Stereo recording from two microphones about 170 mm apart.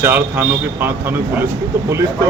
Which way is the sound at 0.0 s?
10° right (ahead or behind).